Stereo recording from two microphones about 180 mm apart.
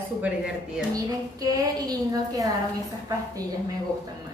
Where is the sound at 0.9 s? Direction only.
20° right (ahead or behind).